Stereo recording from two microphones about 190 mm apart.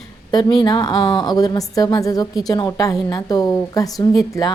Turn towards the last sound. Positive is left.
turn(degrees=20)  # may be behind; listen again after turning